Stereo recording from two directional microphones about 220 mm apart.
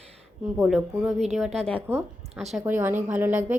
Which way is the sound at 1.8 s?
10° right (ahead or behind).